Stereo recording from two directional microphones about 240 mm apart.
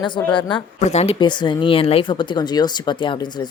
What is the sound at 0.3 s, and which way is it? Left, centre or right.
Speech, centre.